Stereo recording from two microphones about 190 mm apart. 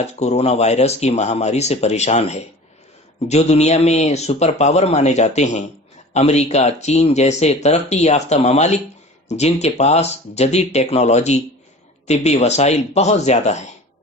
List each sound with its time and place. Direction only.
0.0 s speech: 35° left (ahead or behind)